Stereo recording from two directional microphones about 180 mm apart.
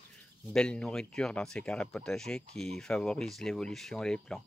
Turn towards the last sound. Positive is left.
turn(degrees=5)  # may be behind; listen again after turning